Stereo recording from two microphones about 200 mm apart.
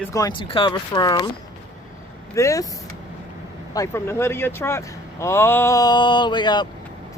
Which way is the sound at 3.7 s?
15° left (ahead or behind).